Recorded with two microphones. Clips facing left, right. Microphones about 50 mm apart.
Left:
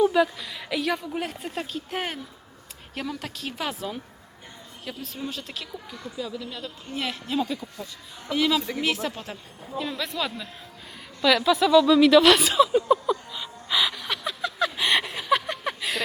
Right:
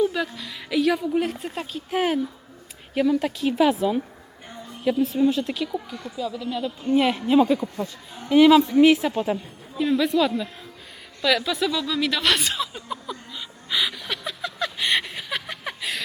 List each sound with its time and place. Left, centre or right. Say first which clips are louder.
0.0 s a woman's voice: left 3 dB; centre
5.2 s a woman's voice: right 10 dB; centre
11.2 s a sound: left 2 dB; centre